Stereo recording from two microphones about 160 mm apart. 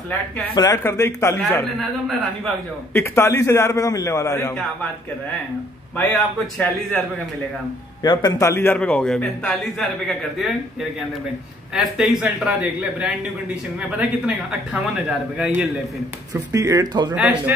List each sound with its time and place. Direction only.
0.6 s a man's voice: 20° left (ahead or behind)
1.8 s a man's voice: centre (ahead or behind)
2.9 s a man's voice: 15° left (ahead or behind)
5.9 s a man's voice: 5° left (ahead or behind)
8.0 s a man's voice: 25° left (ahead or behind); by 10.5 s centre (ahead or behind)
11.7 s a man's voice: 5° right (ahead or behind)
16.5 s speech: 20° right (ahead or behind)
17.1 s speech: 10° right (ahead or behind)